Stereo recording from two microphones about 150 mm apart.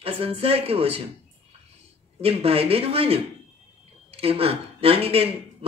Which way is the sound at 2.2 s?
40° right (ahead or behind).